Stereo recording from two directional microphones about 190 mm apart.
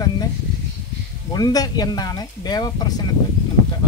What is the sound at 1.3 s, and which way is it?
A woman's voice, 20° left (ahead or behind).